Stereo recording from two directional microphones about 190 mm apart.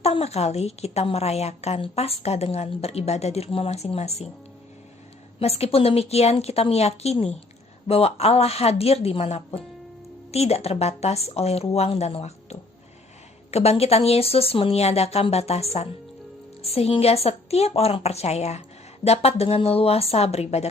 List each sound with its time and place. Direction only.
0.0 s a woman's voice: 35° left (ahead or behind)
5.4 s a woman's voice: 30° left (ahead or behind)